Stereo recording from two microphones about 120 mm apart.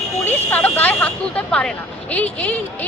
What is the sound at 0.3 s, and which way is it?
Speech, 15° left (ahead or behind).